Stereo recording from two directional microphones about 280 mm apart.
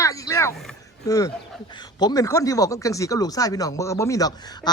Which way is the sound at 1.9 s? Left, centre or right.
Centre.